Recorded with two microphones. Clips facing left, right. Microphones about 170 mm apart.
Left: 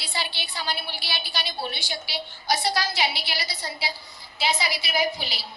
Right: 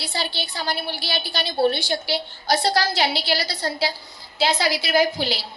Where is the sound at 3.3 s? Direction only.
75° right (ahead or behind).